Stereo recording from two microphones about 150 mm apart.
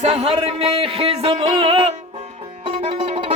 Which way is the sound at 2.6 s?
35° right (ahead or behind).